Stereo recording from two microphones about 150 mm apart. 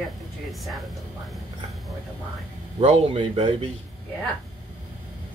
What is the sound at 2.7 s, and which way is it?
Speech, 40° right (ahead or behind).